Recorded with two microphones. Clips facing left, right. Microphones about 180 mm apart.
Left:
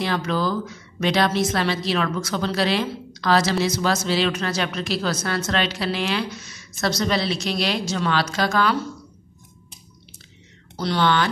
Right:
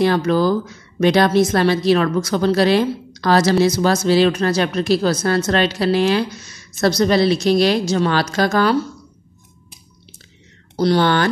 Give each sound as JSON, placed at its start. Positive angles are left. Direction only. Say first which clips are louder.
{"t": 0.0, "sound": "a woman's voice", "louder": "right 8 dB", "side_deg": -45}
{"t": 10.8, "sound": "a woman's voice", "louder": "right 5 dB", "side_deg": -40}